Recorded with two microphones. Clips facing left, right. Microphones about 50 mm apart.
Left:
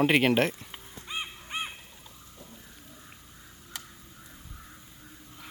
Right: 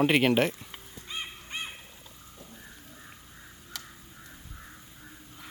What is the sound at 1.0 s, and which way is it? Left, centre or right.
Crow, centre.